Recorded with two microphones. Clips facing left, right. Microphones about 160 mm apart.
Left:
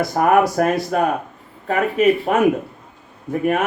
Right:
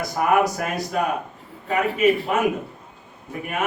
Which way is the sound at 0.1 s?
50° left (ahead or behind).